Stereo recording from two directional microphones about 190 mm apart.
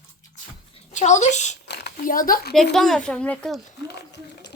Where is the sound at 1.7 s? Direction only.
60° left (ahead or behind).